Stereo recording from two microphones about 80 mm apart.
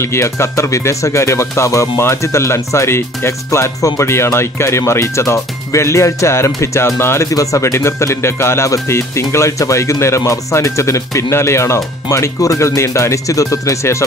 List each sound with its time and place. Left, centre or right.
0.0 s speech: left
7.2 s speech: left